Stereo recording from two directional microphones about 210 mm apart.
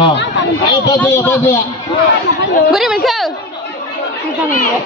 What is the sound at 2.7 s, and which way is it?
Speech, centre (ahead or behind).